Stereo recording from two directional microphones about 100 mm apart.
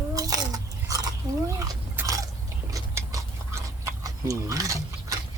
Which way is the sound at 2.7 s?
35° right (ahead or behind).